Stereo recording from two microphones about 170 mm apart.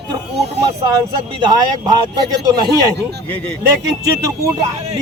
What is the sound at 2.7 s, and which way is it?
Speech, 75° right (ahead or behind).